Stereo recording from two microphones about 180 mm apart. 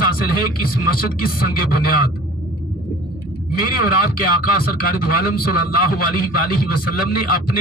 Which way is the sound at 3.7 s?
55° left (ahead or behind).